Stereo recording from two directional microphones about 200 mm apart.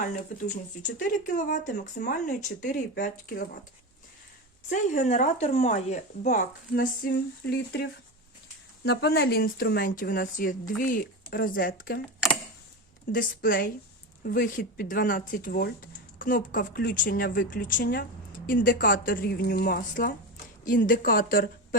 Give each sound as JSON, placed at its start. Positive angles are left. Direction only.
{"t": 0.8, "sound": "speech", "side_deg": 40}
{"t": 4.7, "sound": "speech", "side_deg": 35}
{"t": 13.1, "sound": "speech", "side_deg": 45}